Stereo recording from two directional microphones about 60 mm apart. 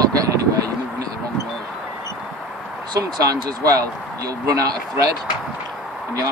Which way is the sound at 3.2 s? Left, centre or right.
Right.